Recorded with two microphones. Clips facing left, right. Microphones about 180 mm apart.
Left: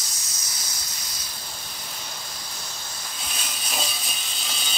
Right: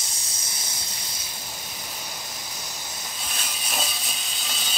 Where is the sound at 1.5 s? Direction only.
10° right (ahead or behind).